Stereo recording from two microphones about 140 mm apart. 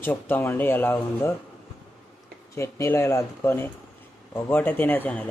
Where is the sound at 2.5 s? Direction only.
20° left (ahead or behind).